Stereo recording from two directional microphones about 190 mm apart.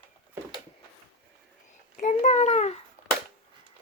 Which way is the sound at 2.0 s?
40° left (ahead or behind).